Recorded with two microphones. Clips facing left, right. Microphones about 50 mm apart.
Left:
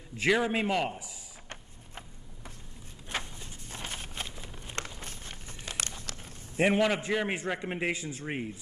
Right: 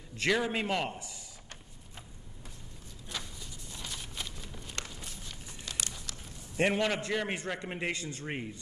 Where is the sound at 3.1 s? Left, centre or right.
Left.